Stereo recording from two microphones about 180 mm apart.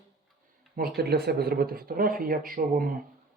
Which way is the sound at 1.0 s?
60° right (ahead or behind).